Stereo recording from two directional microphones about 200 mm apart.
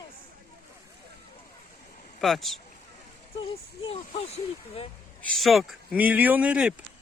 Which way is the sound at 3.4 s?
30° left (ahead or behind).